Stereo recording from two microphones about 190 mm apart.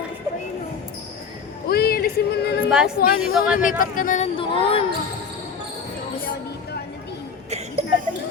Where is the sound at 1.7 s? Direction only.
55° left (ahead or behind).